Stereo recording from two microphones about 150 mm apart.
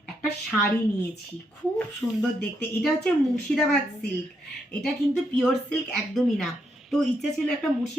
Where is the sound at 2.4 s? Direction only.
5° left (ahead or behind).